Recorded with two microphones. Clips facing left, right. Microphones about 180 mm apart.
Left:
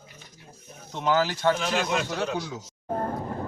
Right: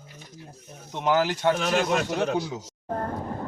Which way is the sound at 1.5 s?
45° right (ahead or behind).